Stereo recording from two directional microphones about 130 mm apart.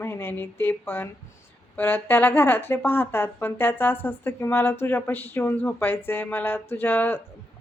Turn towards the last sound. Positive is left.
turn(degrees=15)  # may be behind; listen again after turning